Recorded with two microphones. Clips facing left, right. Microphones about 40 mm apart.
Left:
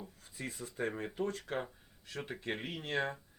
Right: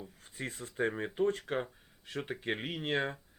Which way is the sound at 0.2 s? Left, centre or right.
Right.